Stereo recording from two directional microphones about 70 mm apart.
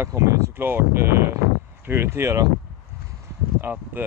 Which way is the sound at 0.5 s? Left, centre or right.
Right.